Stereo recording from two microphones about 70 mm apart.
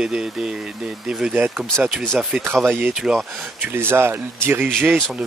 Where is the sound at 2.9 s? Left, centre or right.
Centre.